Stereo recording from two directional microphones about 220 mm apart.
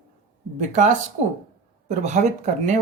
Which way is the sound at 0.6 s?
35° right (ahead or behind).